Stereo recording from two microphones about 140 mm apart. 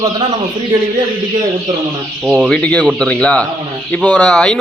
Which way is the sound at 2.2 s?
10° right (ahead or behind).